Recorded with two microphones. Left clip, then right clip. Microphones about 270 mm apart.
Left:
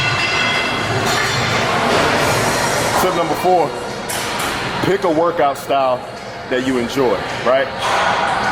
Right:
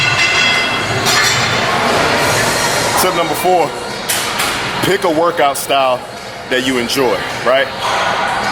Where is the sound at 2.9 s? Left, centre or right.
Centre.